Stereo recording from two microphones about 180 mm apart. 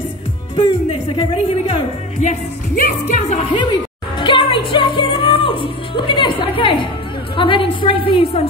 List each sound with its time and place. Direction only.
0.6 s speech: 30° left (ahead or behind)
2.2 s speech: 45° left (ahead or behind)
4.2 s speech: 30° left (ahead or behind)